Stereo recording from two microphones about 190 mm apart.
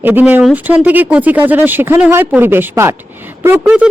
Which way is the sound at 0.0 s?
10° right (ahead or behind).